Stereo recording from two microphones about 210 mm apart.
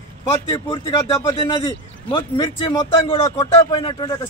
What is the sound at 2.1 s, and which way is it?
Speech, 25° left (ahead or behind).